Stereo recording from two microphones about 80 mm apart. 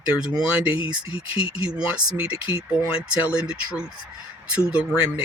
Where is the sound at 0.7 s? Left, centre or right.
Left.